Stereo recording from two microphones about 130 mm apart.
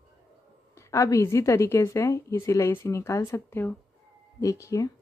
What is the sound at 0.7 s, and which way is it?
A woman's voice, 25° left (ahead or behind).